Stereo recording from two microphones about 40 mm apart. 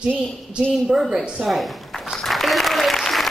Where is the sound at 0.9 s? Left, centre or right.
Centre.